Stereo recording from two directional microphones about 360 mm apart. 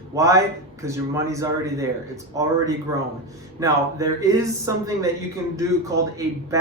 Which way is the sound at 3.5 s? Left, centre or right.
Centre.